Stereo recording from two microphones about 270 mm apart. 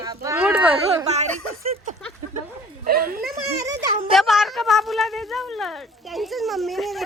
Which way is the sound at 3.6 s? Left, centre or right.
Centre.